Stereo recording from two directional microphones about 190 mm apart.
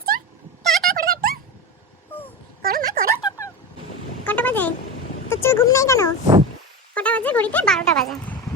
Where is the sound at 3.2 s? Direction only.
15° left (ahead or behind).